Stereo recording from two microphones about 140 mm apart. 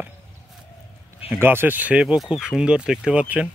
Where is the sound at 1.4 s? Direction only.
15° right (ahead or behind).